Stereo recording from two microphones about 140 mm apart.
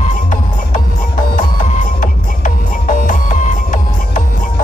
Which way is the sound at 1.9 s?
70° left (ahead or behind).